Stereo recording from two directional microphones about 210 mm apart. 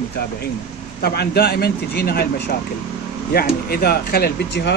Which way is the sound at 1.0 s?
50° left (ahead or behind).